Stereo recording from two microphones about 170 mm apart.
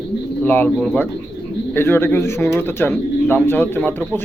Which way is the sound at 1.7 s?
15° left (ahead or behind).